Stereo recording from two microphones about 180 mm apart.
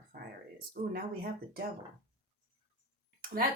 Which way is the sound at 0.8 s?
50° right (ahead or behind).